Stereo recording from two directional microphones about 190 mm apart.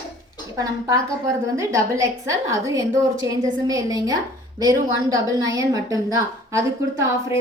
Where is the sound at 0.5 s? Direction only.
15° right (ahead or behind).